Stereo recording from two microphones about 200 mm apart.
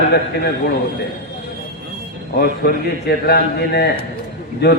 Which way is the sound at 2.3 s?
50° left (ahead or behind).